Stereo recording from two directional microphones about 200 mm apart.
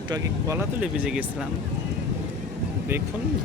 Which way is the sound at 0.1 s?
15° right (ahead or behind).